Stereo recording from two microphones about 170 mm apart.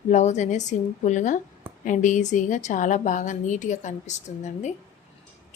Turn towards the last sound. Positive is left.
turn(degrees=45)  # may be behind; listen again after turning